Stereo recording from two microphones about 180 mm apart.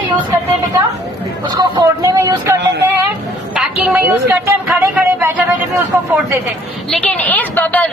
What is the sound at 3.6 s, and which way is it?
A woman's voice, 5° right (ahead or behind).